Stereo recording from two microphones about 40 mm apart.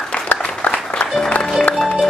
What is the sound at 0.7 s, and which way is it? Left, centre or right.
Music, left.